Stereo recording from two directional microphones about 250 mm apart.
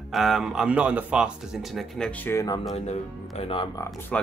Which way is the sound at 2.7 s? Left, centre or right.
Left.